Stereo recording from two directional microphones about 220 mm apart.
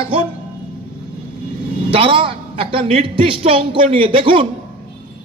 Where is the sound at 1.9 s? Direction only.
25° right (ahead or behind).